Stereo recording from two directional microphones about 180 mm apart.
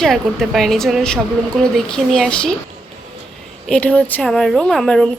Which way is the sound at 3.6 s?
5° left (ahead or behind).